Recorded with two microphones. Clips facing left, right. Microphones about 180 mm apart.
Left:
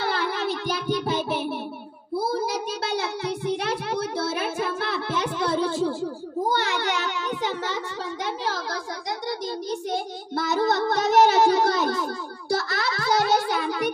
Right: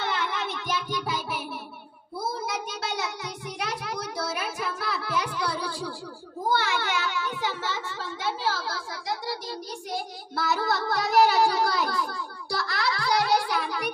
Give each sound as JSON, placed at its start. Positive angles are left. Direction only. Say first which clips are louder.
{"t": 0.0, "sound": "music", "louder": "left 4 dB", "side_deg": 35}
{"t": 2.1, "sound": "child singing", "louder": "left 6 dB", "side_deg": 30}
{"t": 6.5, "sound": "a sound", "louder": "right 3 dB", "side_deg": 20}
{"t": 9.3, "sound": "child singing", "louder": "left 6 dB", "side_deg": 20}